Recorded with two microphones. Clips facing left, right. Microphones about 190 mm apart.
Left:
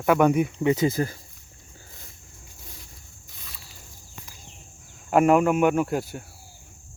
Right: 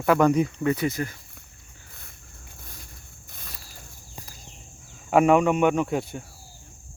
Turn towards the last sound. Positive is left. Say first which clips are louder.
# left 1 dB
turn(degrees=0)  # may be behind; listen again after turning